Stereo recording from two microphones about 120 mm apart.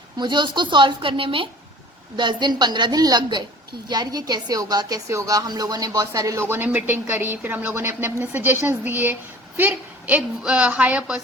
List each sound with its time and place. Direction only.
0.2 s a woman's voice: 40° right (ahead or behind)
6.5 s speech: 15° right (ahead or behind)